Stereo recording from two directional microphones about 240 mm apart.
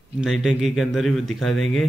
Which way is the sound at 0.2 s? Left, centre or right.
Centre.